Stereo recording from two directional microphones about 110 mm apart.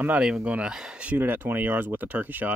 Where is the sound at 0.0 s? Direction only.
15° right (ahead or behind).